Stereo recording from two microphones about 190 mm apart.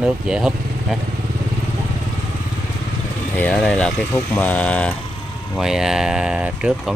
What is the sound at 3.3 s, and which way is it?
Speech, 5° left (ahead or behind).